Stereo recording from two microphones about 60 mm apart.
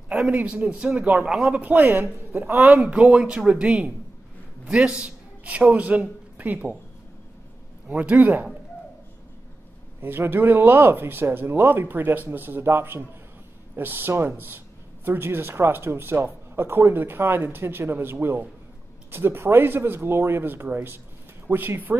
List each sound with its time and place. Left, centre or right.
0.1 s a man's voice: right
1.5 s a man's voice: right
2.6 s a man's voice: right
7.9 s a man's voice: right
10.0 s speech: right